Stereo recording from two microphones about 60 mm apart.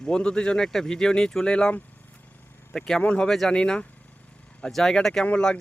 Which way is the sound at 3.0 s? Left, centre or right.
Left.